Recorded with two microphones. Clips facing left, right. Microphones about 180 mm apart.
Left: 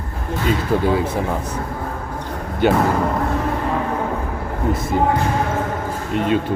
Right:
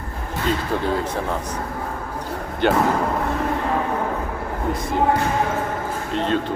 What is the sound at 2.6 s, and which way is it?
Speech, 5° left (ahead or behind).